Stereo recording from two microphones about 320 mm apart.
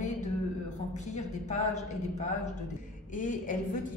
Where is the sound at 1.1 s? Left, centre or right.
Left.